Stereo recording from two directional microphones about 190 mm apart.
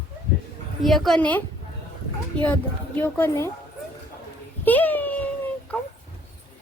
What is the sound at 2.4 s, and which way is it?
Speech, 10° left (ahead or behind).